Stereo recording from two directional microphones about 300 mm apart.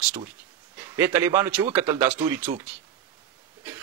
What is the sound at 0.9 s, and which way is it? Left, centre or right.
A man's voice, centre.